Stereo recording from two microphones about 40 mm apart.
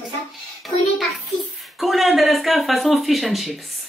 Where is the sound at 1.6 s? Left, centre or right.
Centre.